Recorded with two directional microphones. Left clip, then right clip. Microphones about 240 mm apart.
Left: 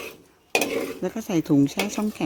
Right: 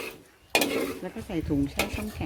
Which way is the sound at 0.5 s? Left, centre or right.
Centre.